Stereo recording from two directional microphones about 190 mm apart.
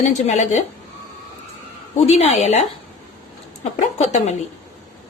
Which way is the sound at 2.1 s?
35° left (ahead or behind).